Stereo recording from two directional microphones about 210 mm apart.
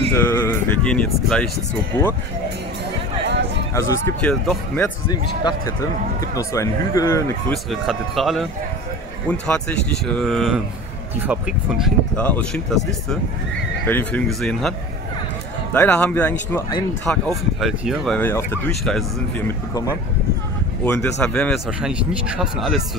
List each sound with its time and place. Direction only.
0.1 s speech: 10° left (ahead or behind)
3.7 s speech: 5° left (ahead or behind)
5.4 s speech: 20° left (ahead or behind)
7.5 s speech: centre (ahead or behind)
13.8 s speech: 10° left (ahead or behind)
15.7 s speech: 5° left (ahead or behind)
20.8 s speech: 5° left (ahead or behind)